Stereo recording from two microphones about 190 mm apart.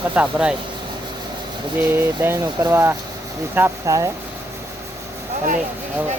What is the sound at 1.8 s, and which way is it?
Speech, 10° right (ahead or behind).